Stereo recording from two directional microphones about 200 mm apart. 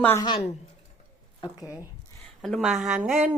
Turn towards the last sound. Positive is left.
turn(degrees=-5)  # may be behind; listen again after turning